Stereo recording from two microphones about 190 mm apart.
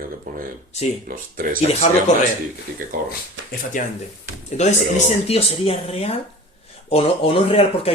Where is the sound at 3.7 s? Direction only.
45° left (ahead or behind).